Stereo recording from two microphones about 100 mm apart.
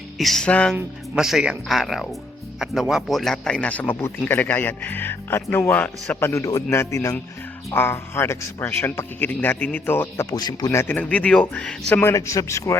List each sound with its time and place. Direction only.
0.2 s speech: 5° left (ahead or behind)
1.1 s speech: 5° right (ahead or behind); by 10.2 s 20° left (ahead or behind)
10.2 s speech: 45° left (ahead or behind)
10.7 s speech: 25° left (ahead or behind); by 12.0 s 10° left (ahead or behind)
12.0 s a man's voice: 30° left (ahead or behind)